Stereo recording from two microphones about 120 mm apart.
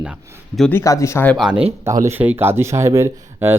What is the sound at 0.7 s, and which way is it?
Speech, 25° left (ahead or behind).